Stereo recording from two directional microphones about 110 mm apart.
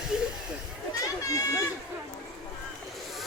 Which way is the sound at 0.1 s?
5° right (ahead or behind).